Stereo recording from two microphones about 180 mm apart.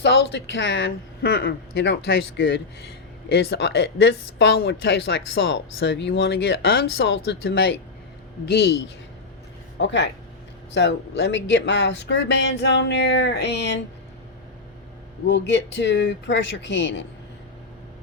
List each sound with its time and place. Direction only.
0.0 s speech: 75° left (ahead or behind)
8.4 s speech: 65° left (ahead or behind)
9.7 s speech: 75° left (ahead or behind)
15.3 s speech: 85° left